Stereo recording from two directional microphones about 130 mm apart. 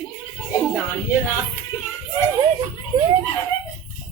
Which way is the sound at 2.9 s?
35° right (ahead or behind).